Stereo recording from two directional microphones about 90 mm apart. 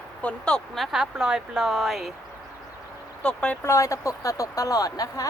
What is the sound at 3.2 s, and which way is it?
Speech, 10° left (ahead or behind).